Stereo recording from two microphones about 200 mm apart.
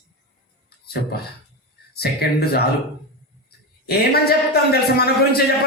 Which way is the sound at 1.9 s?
50° left (ahead or behind).